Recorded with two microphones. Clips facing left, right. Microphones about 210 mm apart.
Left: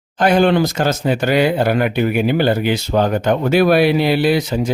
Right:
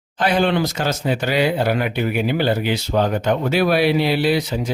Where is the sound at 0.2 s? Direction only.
50° left (ahead or behind).